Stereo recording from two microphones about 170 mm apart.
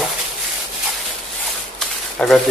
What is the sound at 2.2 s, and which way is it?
Speech, 5° left (ahead or behind).